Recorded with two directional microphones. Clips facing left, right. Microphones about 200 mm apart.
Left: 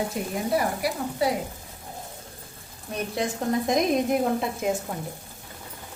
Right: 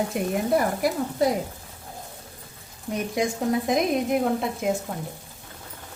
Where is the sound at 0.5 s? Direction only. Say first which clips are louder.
Right 2 dB; 50° right (ahead or behind).